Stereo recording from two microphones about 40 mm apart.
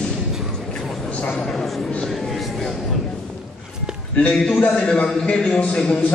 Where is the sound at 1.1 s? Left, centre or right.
Left.